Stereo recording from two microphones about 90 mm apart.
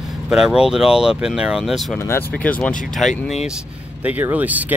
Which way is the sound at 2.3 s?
15° left (ahead or behind).